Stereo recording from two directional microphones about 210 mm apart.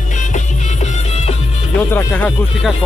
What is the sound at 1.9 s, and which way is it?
Speech, 10° left (ahead or behind).